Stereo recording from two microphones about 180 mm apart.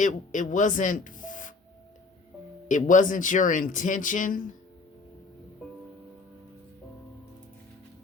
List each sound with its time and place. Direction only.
0.0 s speech: 45° left (ahead or behind)
2.6 s speech: 45° left (ahead or behind)